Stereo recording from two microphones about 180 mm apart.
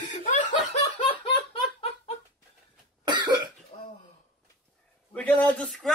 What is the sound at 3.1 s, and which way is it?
Cough, 25° right (ahead or behind).